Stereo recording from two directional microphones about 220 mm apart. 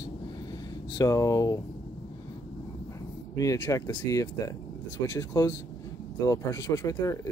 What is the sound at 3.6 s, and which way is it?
Speech, 15° left (ahead or behind).